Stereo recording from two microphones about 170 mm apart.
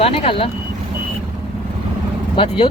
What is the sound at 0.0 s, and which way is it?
Speech, 35° left (ahead or behind).